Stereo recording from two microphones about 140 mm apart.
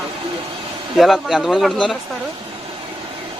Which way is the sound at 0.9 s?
Centre (ahead or behind).